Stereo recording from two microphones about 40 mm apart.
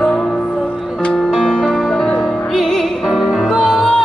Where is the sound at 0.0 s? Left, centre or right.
Centre.